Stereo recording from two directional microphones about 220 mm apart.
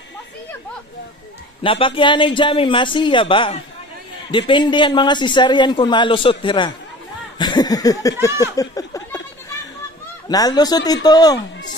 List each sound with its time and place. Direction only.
1.6 s a man's voice: 25° left (ahead or behind)
7.3 s a sound: 20° left (ahead or behind)
10.2 s speech: 15° left (ahead or behind)